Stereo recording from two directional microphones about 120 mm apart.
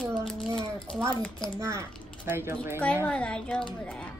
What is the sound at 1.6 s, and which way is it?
Speech, 25° right (ahead or behind).